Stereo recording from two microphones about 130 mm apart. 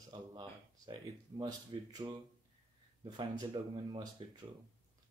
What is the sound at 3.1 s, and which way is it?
Speech, 35° right (ahead or behind).